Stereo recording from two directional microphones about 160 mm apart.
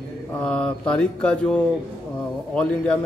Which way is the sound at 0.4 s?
5° left (ahead or behind).